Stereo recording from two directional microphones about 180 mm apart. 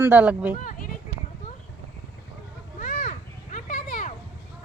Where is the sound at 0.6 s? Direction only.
50° left (ahead or behind).